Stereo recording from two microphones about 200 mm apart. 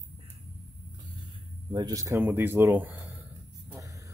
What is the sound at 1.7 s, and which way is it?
Speech, 20° right (ahead or behind).